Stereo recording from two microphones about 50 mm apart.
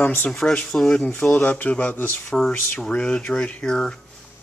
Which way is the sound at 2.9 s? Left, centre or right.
Left.